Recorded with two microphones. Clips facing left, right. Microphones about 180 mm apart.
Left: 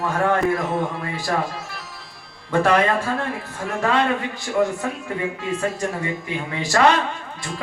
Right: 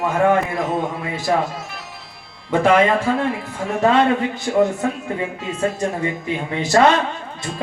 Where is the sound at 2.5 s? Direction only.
20° right (ahead or behind).